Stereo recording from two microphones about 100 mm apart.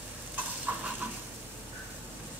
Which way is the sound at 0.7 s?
15° right (ahead or behind).